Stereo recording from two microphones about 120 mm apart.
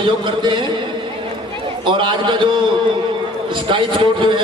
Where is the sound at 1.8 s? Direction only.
40° right (ahead or behind).